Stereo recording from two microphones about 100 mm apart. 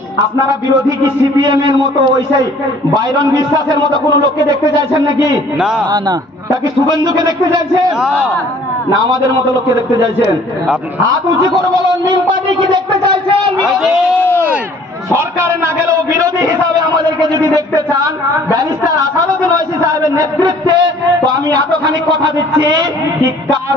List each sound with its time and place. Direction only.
1.4 s a man's voice: 45° right (ahead or behind)
2.9 s a man's voice: 40° right (ahead or behind)
5.6 s a man's voice: 5° right (ahead or behind)
7.1 s a man's voice: 40° right (ahead or behind)
8.0 s a man's voice: 10° right (ahead or behind)
12.0 s a sound: 50° right (ahead or behind)
13.7 s a man's voice: 5° right (ahead or behind)
15.1 s a man's voice: 25° right (ahead or behind); by 23.3 s 45° right (ahead or behind)